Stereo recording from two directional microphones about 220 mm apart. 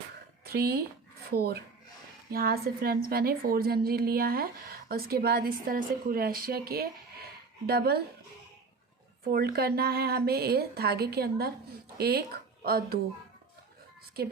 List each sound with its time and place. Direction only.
0.4 s a woman's voice: 45° right (ahead or behind)
9.2 s a woman's voice: 45° right (ahead or behind)